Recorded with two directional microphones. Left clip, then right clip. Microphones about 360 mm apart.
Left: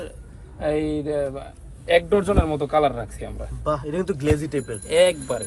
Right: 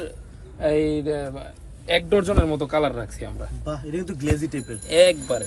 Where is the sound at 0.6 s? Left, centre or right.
Centre.